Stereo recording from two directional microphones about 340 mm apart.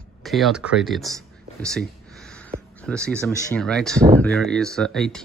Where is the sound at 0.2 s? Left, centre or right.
Centre.